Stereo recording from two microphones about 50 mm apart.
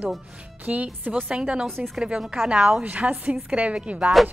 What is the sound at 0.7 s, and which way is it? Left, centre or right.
Speech, right.